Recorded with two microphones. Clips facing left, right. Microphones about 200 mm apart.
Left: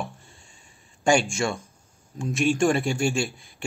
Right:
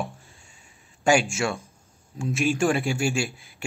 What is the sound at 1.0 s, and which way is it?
A man's voice, 5° right (ahead or behind).